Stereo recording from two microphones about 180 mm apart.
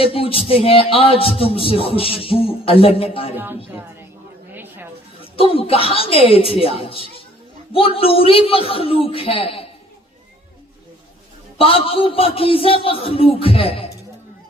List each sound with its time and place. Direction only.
0.0 s speech: 30° left (ahead or behind)
3.3 s speech: 10° right (ahead or behind)
4.5 s a sound: 10° right (ahead or behind)
5.2 s speech: 30° left (ahead or behind)
11.5 s speech: 30° left (ahead or behind)